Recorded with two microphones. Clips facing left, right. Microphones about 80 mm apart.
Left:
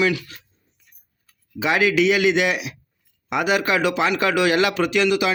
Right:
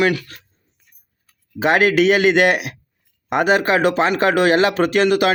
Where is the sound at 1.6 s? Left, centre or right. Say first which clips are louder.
Right 4 dB; right.